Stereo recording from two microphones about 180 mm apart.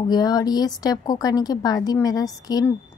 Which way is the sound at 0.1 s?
20° left (ahead or behind).